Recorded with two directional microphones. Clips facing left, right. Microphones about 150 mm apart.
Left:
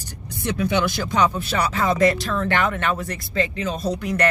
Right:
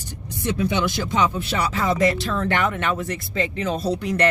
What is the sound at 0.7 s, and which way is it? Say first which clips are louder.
Speech: left 1 dB; 20° right (ahead or behind).